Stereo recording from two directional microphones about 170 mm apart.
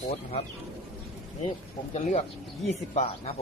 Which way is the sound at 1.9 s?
40° left (ahead or behind).